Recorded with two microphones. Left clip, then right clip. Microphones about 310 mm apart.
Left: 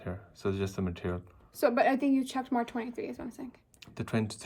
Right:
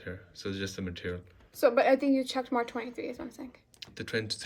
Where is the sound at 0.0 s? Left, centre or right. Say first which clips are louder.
Left 4 dB; centre.